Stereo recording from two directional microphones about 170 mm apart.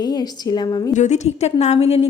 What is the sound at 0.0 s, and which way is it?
Speech, 25° left (ahead or behind).